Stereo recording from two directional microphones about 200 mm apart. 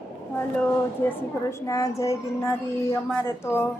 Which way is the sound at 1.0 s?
10° left (ahead or behind).